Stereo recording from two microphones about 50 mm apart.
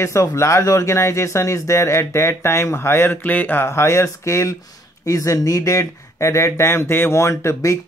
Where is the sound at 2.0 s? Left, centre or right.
Left.